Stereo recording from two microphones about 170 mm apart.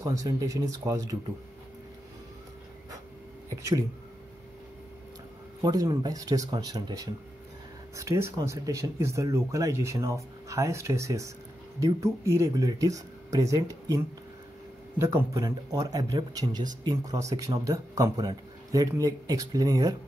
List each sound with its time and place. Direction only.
0.0 s speech: 20° right (ahead or behind)
5.6 s speech: 20° right (ahead or behind)